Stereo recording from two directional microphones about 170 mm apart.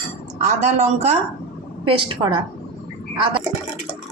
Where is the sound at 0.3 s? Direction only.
45° right (ahead or behind).